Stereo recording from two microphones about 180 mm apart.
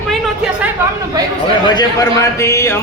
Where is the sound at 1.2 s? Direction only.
20° right (ahead or behind).